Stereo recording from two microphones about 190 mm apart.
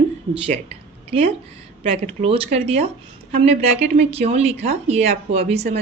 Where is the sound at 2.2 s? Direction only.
30° right (ahead or behind).